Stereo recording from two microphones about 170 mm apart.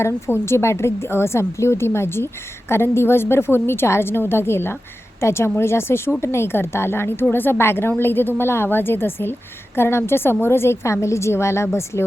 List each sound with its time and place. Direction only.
0.0 s a woman's voice: 15° left (ahead or behind)